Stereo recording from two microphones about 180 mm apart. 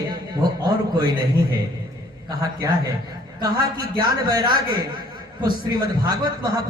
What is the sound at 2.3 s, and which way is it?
Speech, 20° right (ahead or behind).